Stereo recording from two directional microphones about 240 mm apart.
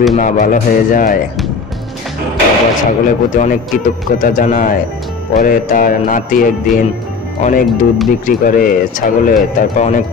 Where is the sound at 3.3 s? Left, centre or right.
Left.